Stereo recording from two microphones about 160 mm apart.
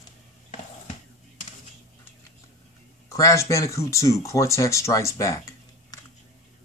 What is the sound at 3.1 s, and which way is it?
Speech, 20° left (ahead or behind).